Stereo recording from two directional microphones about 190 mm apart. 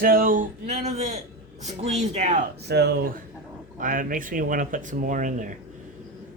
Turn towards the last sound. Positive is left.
turn(degrees=-45)  # may be behind; listen again after turning